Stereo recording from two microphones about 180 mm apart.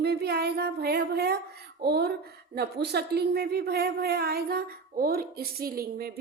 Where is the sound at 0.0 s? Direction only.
65° right (ahead or behind).